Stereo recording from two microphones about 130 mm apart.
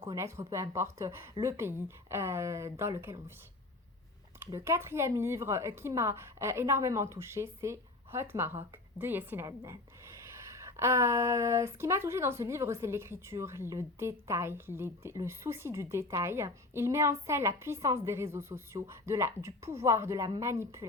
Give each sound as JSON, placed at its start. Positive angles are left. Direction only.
{"t": 0.1, "sound": "speech", "side_deg": -20}
{"t": 4.4, "sound": "speech", "side_deg": -20}
{"t": 10.6, "sound": "speech", "side_deg": -20}